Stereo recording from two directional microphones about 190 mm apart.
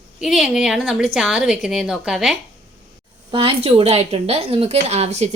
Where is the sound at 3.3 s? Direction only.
30° right (ahead or behind).